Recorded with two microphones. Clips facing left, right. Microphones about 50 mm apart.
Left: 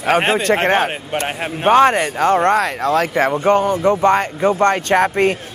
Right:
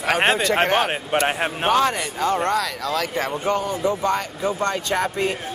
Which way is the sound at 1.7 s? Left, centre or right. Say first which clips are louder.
Left 9 dB; left.